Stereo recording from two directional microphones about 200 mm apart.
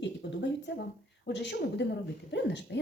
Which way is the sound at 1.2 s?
60° left (ahead or behind).